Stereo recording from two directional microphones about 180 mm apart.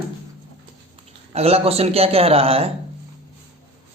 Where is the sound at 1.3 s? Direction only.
35° right (ahead or behind).